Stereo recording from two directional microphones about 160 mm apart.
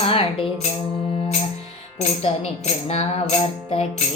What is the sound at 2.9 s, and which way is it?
Child singing, 40° left (ahead or behind).